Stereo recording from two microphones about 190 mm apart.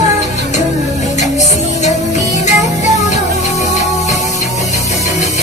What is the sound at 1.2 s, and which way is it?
Music, 35° left (ahead or behind).